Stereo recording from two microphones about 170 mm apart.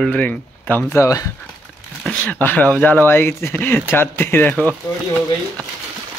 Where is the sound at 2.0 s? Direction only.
10° left (ahead or behind).